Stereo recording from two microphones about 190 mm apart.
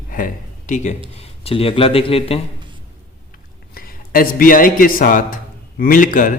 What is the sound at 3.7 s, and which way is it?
A man's voice, 50° left (ahead or behind).